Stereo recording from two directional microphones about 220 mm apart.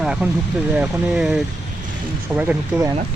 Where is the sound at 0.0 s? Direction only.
5° right (ahead or behind).